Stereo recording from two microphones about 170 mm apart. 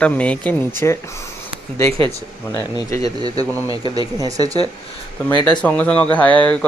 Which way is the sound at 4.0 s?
20° right (ahead or behind).